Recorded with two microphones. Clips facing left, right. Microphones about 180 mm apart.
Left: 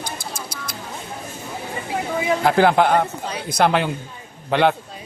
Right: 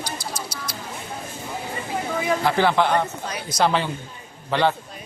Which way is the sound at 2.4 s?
50° left (ahead or behind).